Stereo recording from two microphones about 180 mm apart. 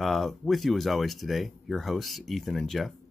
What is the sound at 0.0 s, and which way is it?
Speech, centre (ahead or behind).